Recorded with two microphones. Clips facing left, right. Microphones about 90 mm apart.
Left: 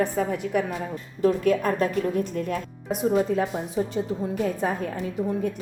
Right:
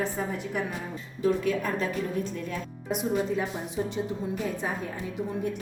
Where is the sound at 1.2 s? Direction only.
50° left (ahead or behind).